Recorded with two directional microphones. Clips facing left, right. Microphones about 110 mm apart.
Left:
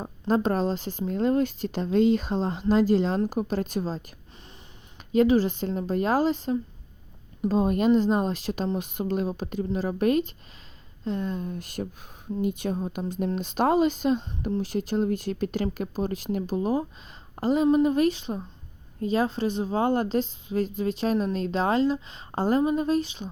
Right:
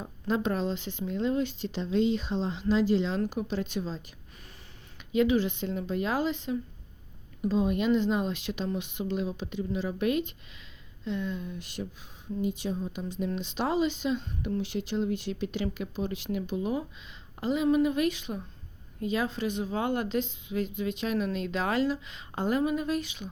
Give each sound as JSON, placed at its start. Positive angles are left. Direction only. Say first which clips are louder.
{"t": 0.0, "sound": "a woman's voice", "louder": "left 5 dB", "side_deg": 40}